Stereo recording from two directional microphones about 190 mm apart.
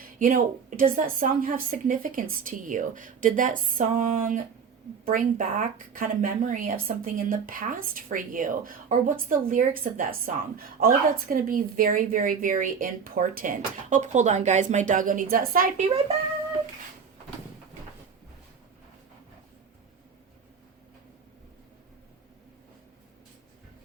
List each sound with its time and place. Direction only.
0.0 s a woman's voice: 45° right (ahead or behind)